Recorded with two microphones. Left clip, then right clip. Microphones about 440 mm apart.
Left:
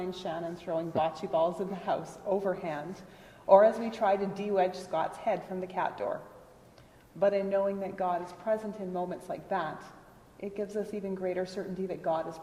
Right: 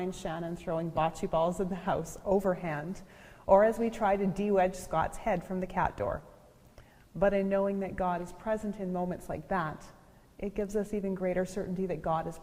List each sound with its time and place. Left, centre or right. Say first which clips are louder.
0.2 s a woman's voice: left 1 dB; right
7.2 s a woman's voice: left 1 dB; right